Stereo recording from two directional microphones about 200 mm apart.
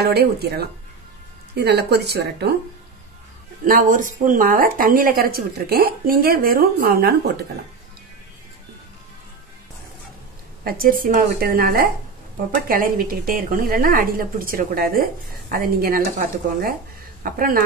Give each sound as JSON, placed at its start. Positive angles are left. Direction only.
{"t": 0.0, "sound": "speech", "side_deg": -50}
{"t": 3.6, "sound": "speech", "side_deg": -40}
{"t": 10.6, "sound": "speech", "side_deg": -45}
{"t": 17.2, "sound": "speech", "side_deg": -45}